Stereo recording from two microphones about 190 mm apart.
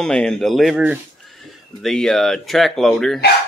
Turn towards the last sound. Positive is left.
turn(degrees=0)  # may be behind; listen again after turning